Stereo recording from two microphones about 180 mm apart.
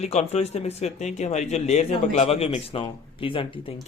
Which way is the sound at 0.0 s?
35° left (ahead or behind).